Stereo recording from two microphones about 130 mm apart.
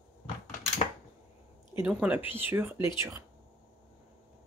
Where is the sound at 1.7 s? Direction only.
15° right (ahead or behind).